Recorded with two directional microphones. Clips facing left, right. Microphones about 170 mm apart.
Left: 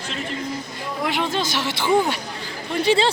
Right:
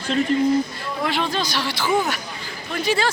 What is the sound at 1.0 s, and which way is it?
A woman's voice, 15° left (ahead or behind).